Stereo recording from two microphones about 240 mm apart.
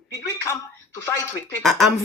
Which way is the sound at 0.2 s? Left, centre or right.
Centre.